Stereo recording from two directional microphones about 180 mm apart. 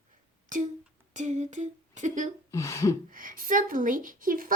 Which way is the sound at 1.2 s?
40° right (ahead or behind).